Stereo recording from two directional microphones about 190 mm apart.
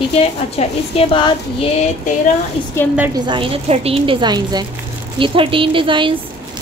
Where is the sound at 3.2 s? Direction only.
30° right (ahead or behind).